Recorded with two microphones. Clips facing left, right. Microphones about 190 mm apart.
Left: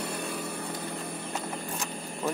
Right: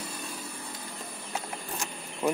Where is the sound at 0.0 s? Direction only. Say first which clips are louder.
Left 6 dB; 65° left (ahead or behind).